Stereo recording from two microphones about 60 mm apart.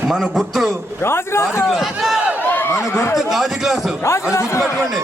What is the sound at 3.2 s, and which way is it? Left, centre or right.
Speech, centre.